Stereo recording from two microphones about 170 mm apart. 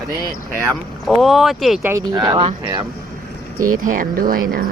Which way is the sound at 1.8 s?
20° right (ahead or behind).